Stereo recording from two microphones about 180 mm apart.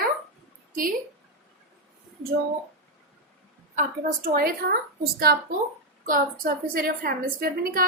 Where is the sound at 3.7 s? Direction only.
45° right (ahead or behind).